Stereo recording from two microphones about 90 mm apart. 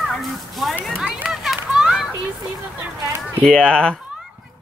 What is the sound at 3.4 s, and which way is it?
Speech, 10° left (ahead or behind).